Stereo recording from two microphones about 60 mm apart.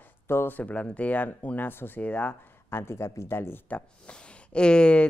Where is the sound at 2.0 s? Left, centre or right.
Left.